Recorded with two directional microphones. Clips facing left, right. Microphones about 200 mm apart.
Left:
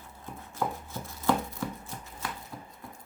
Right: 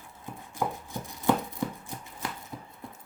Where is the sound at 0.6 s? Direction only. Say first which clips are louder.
Right 1 dB; 15° right (ahead or behind).